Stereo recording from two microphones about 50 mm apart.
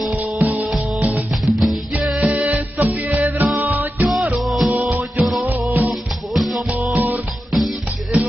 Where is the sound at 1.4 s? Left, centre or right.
Centre.